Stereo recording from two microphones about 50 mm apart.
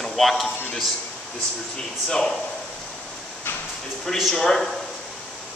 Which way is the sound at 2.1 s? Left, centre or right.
Centre.